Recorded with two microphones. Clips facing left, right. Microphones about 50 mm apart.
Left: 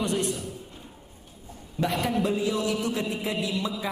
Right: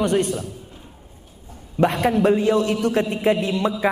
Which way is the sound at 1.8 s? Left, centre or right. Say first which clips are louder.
Right 8 dB; right.